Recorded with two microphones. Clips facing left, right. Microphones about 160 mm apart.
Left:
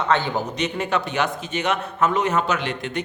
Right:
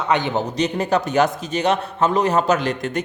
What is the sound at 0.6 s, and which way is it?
A man's voice, 40° right (ahead or behind).